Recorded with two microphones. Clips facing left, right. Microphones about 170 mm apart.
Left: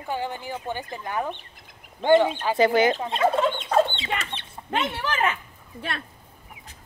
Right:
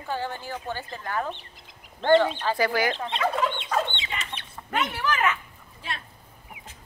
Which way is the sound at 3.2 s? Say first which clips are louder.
Left 5 dB; 25° left (ahead or behind).